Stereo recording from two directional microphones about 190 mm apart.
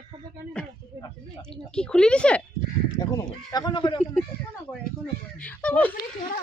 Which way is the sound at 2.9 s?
20° left (ahead or behind).